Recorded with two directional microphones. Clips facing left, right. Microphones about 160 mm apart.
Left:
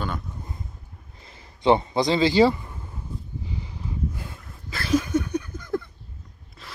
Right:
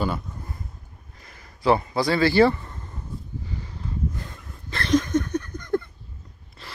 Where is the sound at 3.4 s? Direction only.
15° left (ahead or behind).